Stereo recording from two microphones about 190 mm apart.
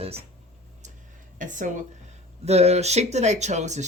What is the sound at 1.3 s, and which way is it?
Speech, 40° right (ahead or behind).